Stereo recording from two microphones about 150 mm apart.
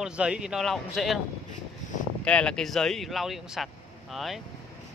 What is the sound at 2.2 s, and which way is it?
Speech, 5° left (ahead or behind).